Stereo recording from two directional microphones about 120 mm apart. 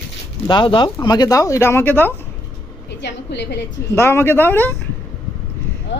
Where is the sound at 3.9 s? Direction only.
20° left (ahead or behind).